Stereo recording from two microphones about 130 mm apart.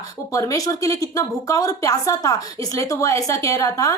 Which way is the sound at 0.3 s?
25° left (ahead or behind).